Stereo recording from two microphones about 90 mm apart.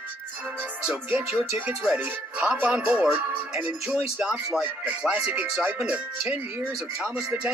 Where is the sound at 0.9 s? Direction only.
10° right (ahead or behind).